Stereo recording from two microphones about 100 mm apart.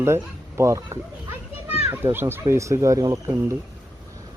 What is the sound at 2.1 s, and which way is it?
Speech, 25° right (ahead or behind).